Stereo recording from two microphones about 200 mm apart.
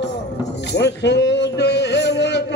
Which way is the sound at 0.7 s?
60° left (ahead or behind).